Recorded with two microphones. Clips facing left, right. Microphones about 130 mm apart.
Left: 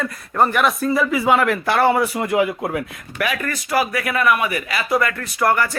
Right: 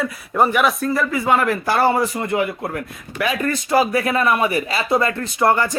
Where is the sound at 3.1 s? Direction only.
25° right (ahead or behind).